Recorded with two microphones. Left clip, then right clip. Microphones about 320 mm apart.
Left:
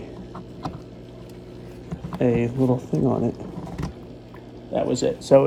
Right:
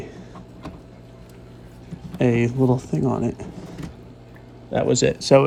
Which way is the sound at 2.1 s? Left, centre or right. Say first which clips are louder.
Right 1 dB; right.